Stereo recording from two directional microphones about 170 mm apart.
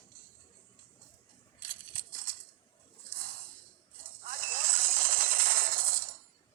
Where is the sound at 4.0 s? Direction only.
55° right (ahead or behind).